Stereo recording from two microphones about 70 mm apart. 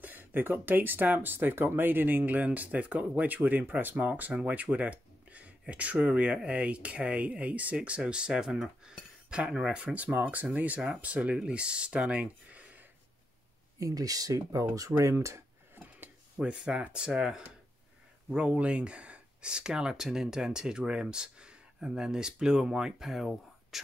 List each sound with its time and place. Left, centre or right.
0.0 s speech: right
9.9 s speech: right
13.7 s speech: right
15.8 s a sound: right
16.5 s speech: centre